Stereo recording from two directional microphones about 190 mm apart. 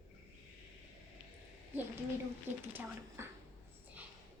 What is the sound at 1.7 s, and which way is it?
A woman's voice, 10° right (ahead or behind).